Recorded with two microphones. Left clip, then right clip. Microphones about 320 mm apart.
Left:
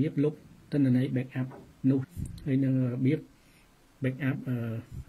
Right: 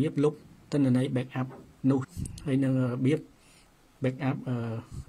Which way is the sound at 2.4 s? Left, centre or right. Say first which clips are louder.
Right 1 dB; centre.